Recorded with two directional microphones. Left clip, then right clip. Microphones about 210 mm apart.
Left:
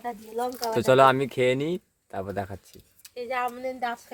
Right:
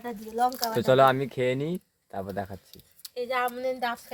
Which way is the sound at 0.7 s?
5° left (ahead or behind).